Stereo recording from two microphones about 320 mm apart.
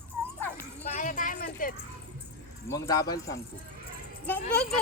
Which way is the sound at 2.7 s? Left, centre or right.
Centre.